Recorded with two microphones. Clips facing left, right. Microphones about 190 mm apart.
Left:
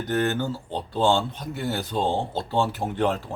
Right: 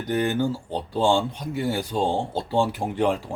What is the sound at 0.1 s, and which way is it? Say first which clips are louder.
Speech: right 2 dB; 10° right (ahead or behind).